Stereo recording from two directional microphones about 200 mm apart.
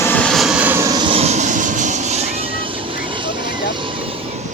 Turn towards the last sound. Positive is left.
turn(degrees=-25)  # may be behind; listen again after turning